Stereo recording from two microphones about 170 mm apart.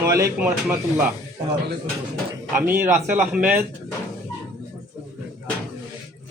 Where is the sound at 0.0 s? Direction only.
15° right (ahead or behind).